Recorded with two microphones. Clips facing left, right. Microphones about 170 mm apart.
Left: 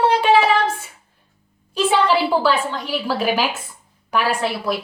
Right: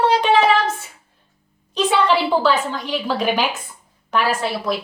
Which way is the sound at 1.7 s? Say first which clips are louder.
Even; 5° left (ahead or behind).